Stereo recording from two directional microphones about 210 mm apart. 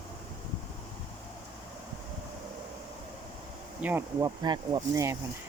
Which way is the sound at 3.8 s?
10° right (ahead or behind).